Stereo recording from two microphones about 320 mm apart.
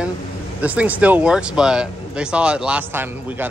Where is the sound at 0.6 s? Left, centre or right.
Centre.